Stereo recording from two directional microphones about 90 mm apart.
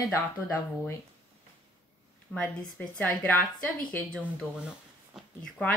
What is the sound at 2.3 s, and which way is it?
Speech, 15° left (ahead or behind).